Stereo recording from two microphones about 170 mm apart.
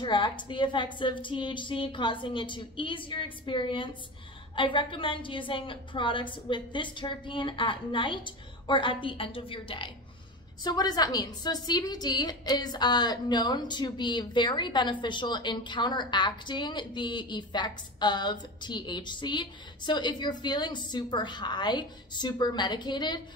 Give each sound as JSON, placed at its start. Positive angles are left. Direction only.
{"t": 0.0, "sound": "a woman's voice", "side_deg": 30}